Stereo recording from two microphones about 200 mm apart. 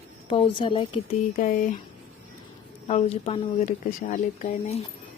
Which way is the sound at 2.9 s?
30° left (ahead or behind).